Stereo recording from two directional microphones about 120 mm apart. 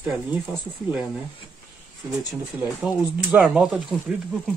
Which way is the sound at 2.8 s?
10° right (ahead or behind).